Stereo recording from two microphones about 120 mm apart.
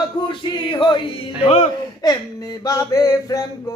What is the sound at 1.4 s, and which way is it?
Speech, 60° left (ahead or behind).